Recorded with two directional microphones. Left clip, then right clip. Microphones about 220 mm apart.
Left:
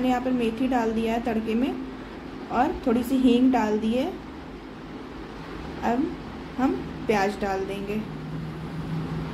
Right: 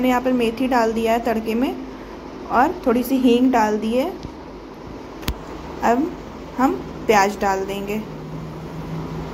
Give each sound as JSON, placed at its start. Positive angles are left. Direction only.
{"t": 0.0, "sound": "a woman's voice", "side_deg": -5}
{"t": 6.6, "sound": "a woman's voice", "side_deg": -5}